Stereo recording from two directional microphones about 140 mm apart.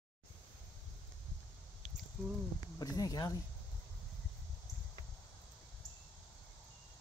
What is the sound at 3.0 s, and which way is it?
Speech, 25° left (ahead or behind).